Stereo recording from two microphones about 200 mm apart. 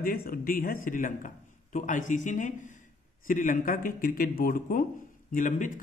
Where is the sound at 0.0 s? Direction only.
45° left (ahead or behind).